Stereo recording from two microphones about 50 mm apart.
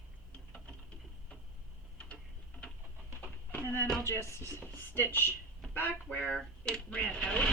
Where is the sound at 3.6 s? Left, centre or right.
Left.